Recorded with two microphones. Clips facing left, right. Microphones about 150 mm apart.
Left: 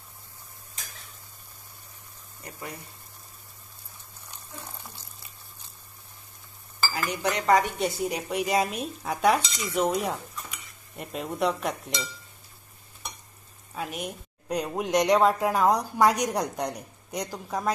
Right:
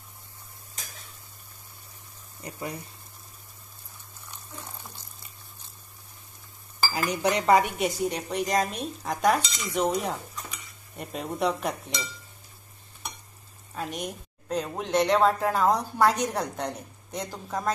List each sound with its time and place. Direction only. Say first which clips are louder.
6.9 s cutlery: right 3 dB; 20° right (ahead or behind)
7.8 s a woman's voice: right 1 dB; 5° left (ahead or behind)
13.7 s a woman's voice: even; 5° left (ahead or behind)